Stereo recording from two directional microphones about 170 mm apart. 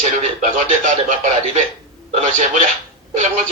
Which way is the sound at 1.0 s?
45° right (ahead or behind).